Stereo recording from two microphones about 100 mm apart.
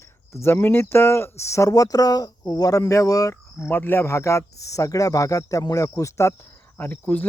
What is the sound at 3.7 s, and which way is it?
Speech, 20° left (ahead or behind).